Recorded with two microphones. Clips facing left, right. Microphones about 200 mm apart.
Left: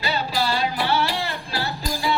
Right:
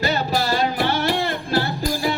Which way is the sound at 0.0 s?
45° right (ahead or behind).